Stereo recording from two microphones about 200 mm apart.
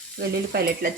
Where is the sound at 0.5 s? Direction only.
50° right (ahead or behind).